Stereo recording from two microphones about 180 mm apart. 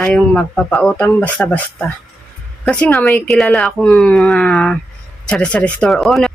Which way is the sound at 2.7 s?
10° left (ahead or behind).